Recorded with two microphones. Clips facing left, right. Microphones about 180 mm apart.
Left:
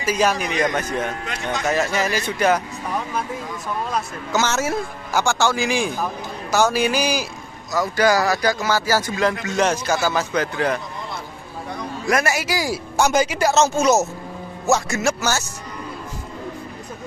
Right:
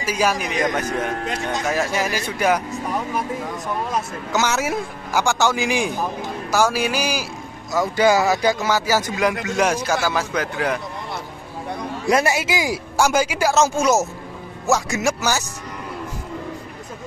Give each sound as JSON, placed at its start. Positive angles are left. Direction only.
{"t": 0.0, "sound": "speech", "side_deg": -10}
{"t": 3.9, "sound": "speech", "side_deg": -15}
{"t": 7.7, "sound": "speech", "side_deg": -25}
{"t": 12.1, "sound": "speech", "side_deg": -25}